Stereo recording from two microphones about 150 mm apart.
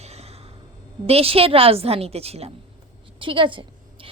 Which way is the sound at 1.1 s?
40° right (ahead or behind).